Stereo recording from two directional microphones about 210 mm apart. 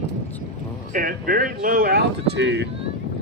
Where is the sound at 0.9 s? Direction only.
45° right (ahead or behind).